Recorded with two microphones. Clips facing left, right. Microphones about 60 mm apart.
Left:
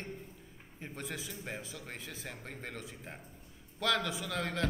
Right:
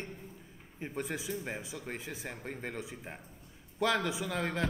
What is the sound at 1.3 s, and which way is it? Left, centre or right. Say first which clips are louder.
A man's voice: right 5 dB; centre.